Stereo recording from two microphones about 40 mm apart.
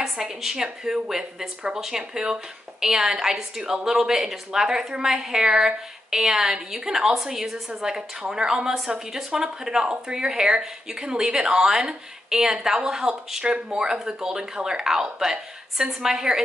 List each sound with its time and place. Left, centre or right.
0.0 s a woman's voice: centre